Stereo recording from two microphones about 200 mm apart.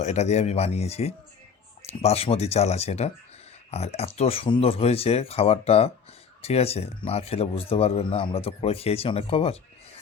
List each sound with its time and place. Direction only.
0.0 s speech: 35° left (ahead or behind)